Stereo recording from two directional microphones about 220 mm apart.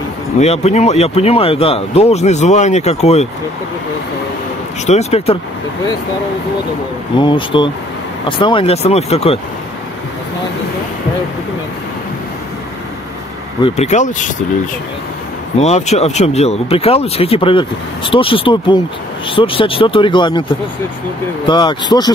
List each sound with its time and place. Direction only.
0.4 s speech: 30° left (ahead or behind)
4.8 s speech: 30° left (ahead or behind)
7.2 s speech: 20° left (ahead or behind)
13.6 s speech: 25° left (ahead or behind)
15.6 s speech: 30° left (ahead or behind)
21.5 s speech: 20° left (ahead or behind)